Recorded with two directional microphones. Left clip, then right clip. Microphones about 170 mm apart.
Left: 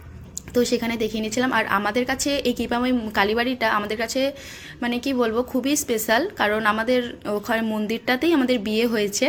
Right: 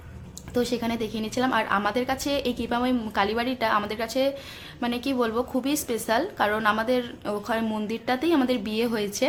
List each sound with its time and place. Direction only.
0.5 s a woman's voice: 5° left (ahead or behind)
7.9 s a woman's voice: 10° left (ahead or behind)